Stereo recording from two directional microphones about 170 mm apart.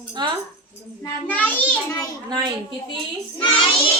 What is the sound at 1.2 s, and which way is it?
Speech, 10° left (ahead or behind).